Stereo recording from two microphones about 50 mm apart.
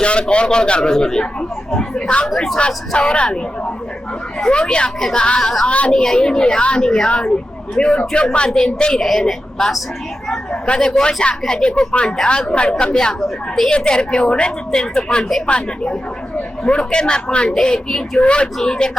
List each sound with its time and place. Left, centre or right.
0.0 s a man's voice: left
2.3 s a man's voice: centre
2.6 s speech: left
4.5 s a man's voice: centre
5.6 s a man's voice: left
13.2 s a woman's voice: centre
13.7 s a man's voice: centre